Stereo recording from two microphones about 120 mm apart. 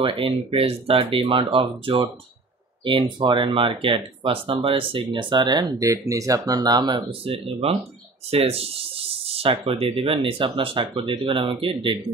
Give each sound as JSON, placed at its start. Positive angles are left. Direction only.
{"t": 0.0, "sound": "speech", "side_deg": -50}